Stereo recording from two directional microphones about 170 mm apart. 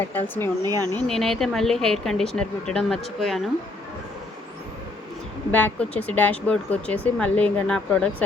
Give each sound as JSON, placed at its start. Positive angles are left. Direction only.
{"t": 0.1, "sound": "speech", "side_deg": 10}
{"t": 0.6, "sound": "speech", "side_deg": -20}
{"t": 0.9, "sound": "speech", "side_deg": 5}
{"t": 5.5, "sound": "speech", "side_deg": 10}